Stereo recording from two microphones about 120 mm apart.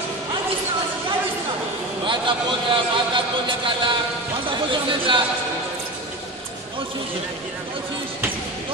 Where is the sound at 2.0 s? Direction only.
45° right (ahead or behind).